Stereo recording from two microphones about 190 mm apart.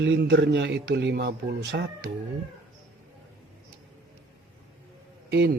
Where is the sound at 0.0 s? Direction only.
70° right (ahead or behind).